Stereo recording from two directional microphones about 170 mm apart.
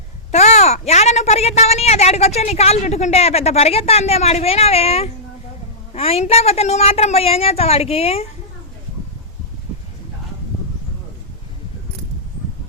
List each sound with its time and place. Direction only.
0.3 s a woman's voice: 40° left (ahead or behind)